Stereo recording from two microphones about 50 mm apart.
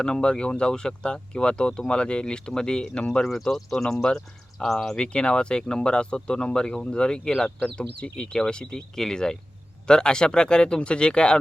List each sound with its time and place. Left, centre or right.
0.0 s speech: centre
3.4 s speech: centre
4.9 s speech: centre